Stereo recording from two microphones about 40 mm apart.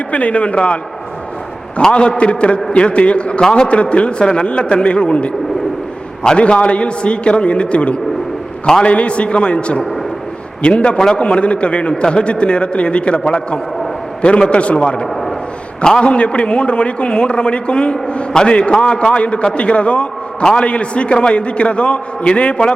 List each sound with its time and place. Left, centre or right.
0.1 s a man's voice: left
1.9 s a man's voice: left
15.1 s a sound: centre
15.8 s a man's voice: left
20.4 s a man's voice: centre
20.7 s a man's voice: left